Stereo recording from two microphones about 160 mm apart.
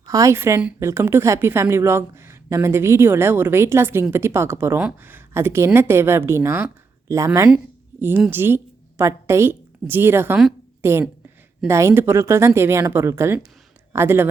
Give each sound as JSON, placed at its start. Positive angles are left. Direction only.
{"t": 0.0, "sound": "a woman's voice", "side_deg": -20}